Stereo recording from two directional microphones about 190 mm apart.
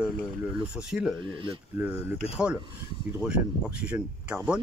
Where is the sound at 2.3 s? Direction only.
5° right (ahead or behind).